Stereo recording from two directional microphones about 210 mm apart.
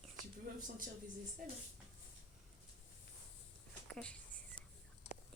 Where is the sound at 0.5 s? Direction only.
40° right (ahead or behind).